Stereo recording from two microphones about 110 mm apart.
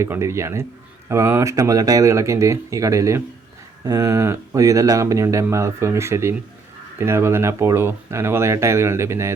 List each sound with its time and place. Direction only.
0.0 s speech: 25° right (ahead or behind)